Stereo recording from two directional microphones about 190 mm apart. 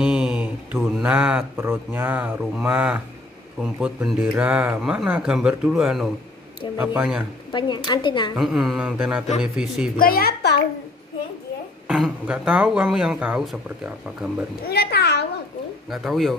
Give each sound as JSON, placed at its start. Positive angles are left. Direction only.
{"t": 0.0, "sound": "mantra", "side_deg": -5}
{"t": 3.6, "sound": "a man's voice", "side_deg": -5}
{"t": 7.5, "sound": "speech", "side_deg": 25}
{"t": 8.4, "sound": "speech", "side_deg": 0}
{"t": 9.9, "sound": "a woman's voice", "side_deg": 50}
{"t": 11.9, "sound": "speech", "side_deg": -5}
{"t": 14.7, "sound": "a child's voice", "side_deg": 60}
{"t": 15.9, "sound": "speech", "side_deg": 0}